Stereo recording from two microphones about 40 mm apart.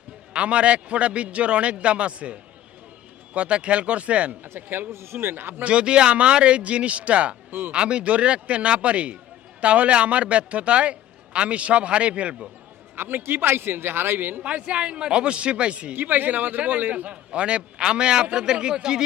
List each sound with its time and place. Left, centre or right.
0.3 s speech: right
4.4 s a man's voice: right
5.6 s a man's voice: right
13.0 s a man's voice: right
14.4 s a man's voice: right
15.9 s a man's voice: right
17.1 s a man's voice: right